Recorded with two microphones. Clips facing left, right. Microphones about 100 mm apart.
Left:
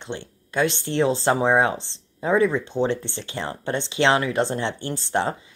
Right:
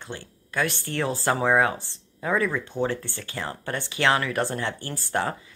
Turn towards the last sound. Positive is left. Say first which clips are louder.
# left 3 dB
turn(degrees=25)  # may be behind; listen again after turning